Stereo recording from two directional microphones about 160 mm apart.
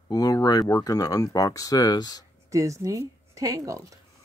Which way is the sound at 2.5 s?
20° right (ahead or behind).